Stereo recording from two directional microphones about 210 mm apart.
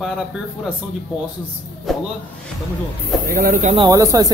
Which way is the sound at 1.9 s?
Centre (ahead or behind).